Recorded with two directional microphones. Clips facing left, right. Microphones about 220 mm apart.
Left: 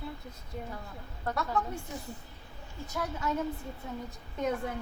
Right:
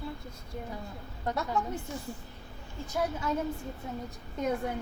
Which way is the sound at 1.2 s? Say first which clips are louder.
Right 1 dB; 20° right (ahead or behind).